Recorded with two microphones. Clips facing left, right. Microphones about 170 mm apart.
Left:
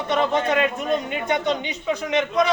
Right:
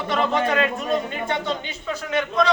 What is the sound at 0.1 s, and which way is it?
A man's voice, 20° left (ahead or behind).